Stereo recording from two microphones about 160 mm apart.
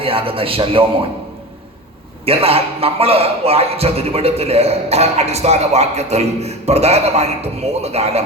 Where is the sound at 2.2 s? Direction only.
40° right (ahead or behind).